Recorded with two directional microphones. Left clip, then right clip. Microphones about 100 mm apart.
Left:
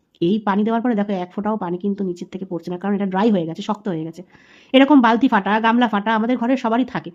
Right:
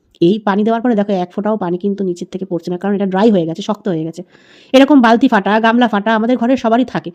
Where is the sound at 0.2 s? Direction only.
40° right (ahead or behind).